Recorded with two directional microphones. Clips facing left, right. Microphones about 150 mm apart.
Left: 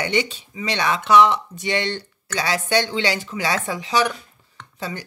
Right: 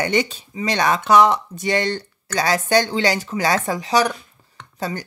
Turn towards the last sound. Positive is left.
turn(degrees=-45)  # may be behind; listen again after turning